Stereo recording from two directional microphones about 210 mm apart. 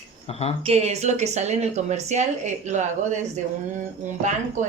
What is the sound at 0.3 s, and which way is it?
Speech, 30° left (ahead or behind).